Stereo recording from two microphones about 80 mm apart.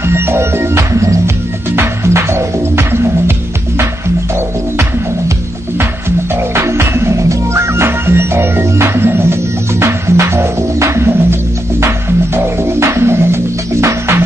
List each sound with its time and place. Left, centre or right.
0.0 s music: right
5.8 s music: right
12.4 s music: right